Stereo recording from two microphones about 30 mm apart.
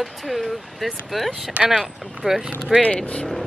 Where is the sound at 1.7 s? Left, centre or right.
Centre.